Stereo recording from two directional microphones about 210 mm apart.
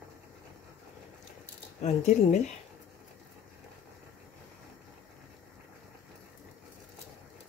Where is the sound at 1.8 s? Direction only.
35° left (ahead or behind).